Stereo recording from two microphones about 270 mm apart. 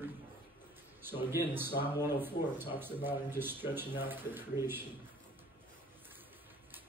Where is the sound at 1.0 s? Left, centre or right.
Centre.